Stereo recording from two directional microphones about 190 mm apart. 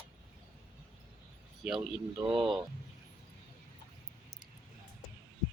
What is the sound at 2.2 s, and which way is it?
Speech, 25° right (ahead or behind).